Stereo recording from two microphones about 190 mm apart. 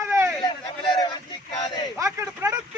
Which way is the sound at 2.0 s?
15° right (ahead or behind).